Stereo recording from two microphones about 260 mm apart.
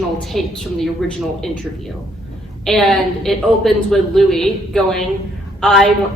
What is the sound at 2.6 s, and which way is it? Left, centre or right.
A woman's voice, centre.